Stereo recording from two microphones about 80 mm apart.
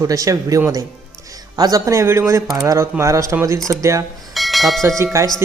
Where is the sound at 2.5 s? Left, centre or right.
Right.